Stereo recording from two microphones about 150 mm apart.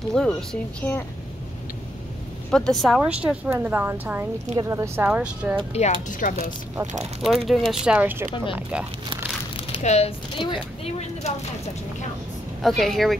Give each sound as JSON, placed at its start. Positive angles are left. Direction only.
{"t": 0.1, "sound": "speech", "side_deg": 5}
{"t": 2.5, "sound": "a woman's voice", "side_deg": 0}
{"t": 5.7, "sound": "a woman's voice", "side_deg": 50}
{"t": 6.9, "sound": "speech", "side_deg": -50}
{"t": 7.2, "sound": "a woman's voice", "side_deg": 0}
{"t": 9.6, "sound": "speech", "side_deg": 45}
{"t": 12.6, "sound": "speech", "side_deg": 0}